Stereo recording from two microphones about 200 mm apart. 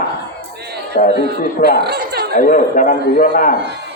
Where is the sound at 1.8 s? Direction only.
55° right (ahead or behind).